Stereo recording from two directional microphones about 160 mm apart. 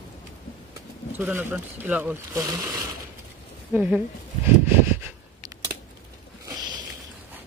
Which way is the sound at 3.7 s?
10° right (ahead or behind).